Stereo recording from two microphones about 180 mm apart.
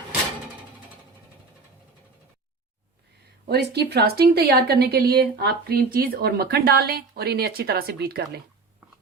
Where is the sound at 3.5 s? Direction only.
65° right (ahead or behind).